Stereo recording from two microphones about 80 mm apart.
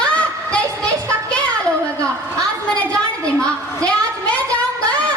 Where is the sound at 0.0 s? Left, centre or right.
Centre.